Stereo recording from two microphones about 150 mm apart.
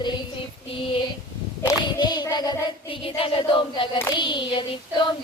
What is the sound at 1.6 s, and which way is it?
Child singing, 30° left (ahead or behind).